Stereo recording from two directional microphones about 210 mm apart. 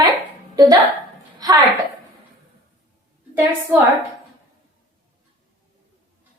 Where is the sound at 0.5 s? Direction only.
15° right (ahead or behind).